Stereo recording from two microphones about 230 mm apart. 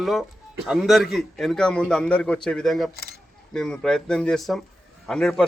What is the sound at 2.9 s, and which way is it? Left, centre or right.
Speech, left.